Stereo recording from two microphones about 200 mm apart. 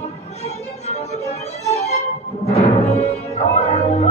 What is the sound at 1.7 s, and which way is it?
Music, 35° left (ahead or behind).